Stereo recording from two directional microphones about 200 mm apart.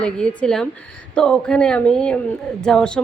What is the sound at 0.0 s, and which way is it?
A woman's voice, 5° left (ahead or behind).